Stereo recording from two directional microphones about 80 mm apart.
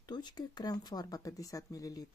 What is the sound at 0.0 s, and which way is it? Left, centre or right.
Speech, left.